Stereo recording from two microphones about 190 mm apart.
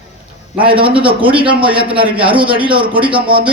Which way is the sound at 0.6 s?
25° right (ahead or behind).